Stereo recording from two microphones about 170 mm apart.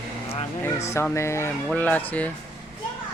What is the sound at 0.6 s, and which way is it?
Speech, 15° left (ahead or behind).